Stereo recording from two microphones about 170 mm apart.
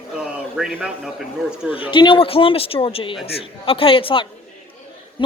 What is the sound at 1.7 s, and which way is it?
Speech, 30° left (ahead or behind).